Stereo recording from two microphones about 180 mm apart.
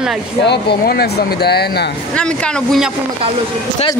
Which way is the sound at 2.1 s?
5° left (ahead or behind).